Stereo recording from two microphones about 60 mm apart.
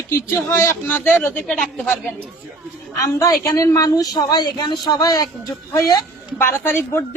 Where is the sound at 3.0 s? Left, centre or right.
Left.